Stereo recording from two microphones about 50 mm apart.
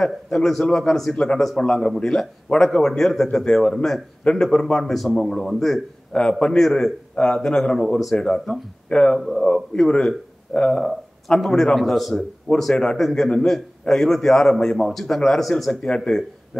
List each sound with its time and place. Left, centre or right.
0.0 s a man's voice: centre
8.2 s a man's voice: centre
9.2 s a man's voice: centre
10.8 s a man's voice: centre